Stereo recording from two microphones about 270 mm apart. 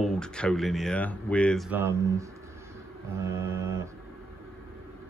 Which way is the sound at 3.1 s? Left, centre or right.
Centre.